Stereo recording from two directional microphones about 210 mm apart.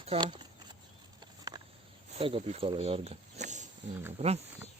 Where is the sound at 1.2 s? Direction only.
20° right (ahead or behind).